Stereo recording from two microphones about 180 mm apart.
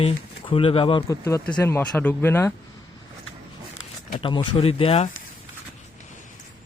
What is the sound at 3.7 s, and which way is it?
Speech, 25° left (ahead or behind).